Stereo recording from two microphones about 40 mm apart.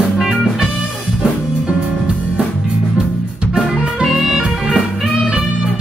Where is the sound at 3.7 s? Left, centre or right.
Centre.